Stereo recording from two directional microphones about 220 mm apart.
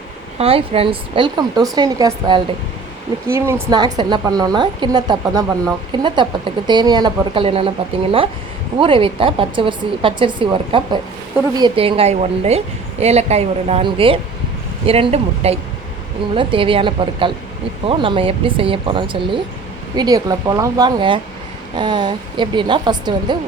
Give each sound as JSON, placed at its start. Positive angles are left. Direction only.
{"t": 0.3, "sound": "a woman's voice", "side_deg": -25}